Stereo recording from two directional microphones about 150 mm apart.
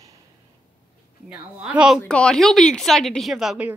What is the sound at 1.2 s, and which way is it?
Speech, 5° right (ahead or behind).